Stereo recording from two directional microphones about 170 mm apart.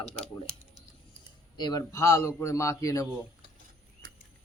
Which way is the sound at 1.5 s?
25° left (ahead or behind).